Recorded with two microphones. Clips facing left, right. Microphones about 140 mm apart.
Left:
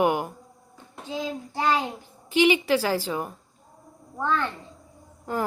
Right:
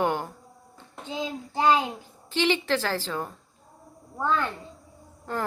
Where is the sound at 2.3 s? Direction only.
15° left (ahead or behind).